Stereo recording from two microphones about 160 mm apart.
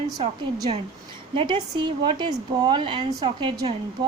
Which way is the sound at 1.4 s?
25° right (ahead or behind).